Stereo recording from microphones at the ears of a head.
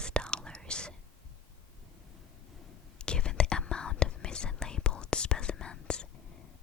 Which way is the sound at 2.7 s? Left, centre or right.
Left.